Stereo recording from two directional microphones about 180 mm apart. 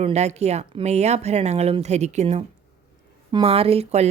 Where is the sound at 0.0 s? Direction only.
35° right (ahead or behind).